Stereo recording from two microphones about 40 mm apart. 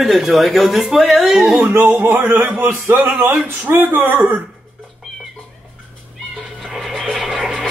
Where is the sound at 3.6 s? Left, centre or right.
Right.